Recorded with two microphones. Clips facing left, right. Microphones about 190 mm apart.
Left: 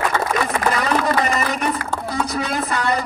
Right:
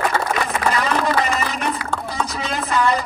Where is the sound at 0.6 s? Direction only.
45° left (ahead or behind).